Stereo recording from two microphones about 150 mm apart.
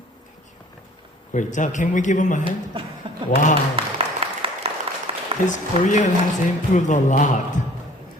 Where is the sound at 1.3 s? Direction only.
55° left (ahead or behind).